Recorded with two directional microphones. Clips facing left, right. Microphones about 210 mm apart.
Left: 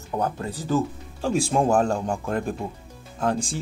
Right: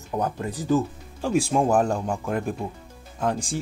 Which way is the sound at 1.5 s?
5° right (ahead or behind).